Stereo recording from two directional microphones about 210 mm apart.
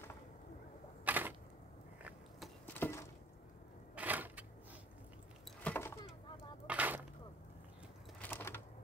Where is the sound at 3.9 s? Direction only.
10° right (ahead or behind).